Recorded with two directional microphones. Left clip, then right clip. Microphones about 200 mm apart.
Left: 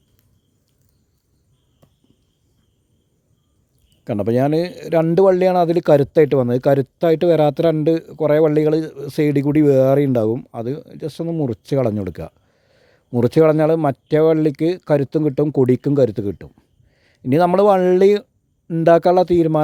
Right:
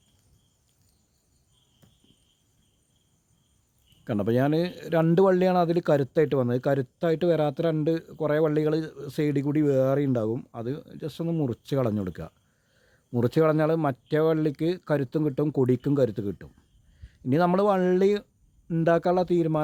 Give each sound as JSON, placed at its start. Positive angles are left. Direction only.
{"t": 4.0, "sound": "a man's voice", "side_deg": 30}